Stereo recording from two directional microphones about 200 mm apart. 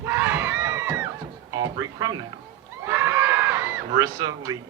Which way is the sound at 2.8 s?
10° right (ahead or behind).